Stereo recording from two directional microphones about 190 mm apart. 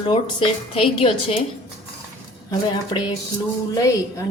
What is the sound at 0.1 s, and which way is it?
A woman's voice, 30° left (ahead or behind).